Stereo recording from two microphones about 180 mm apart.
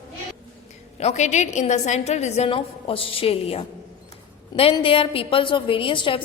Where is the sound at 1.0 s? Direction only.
40° left (ahead or behind).